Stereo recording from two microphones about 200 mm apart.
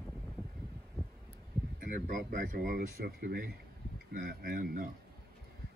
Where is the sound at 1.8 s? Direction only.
45° right (ahead or behind).